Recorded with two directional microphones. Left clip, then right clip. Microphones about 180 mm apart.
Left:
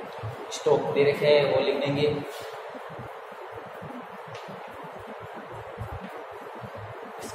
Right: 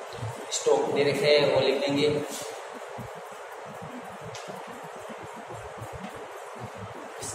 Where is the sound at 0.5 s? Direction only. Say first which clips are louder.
Even; 30° left (ahead or behind).